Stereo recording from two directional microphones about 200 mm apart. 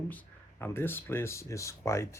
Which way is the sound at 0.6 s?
10° left (ahead or behind).